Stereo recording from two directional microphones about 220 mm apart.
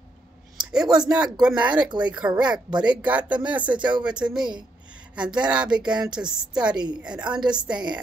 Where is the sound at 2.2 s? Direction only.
5° right (ahead or behind).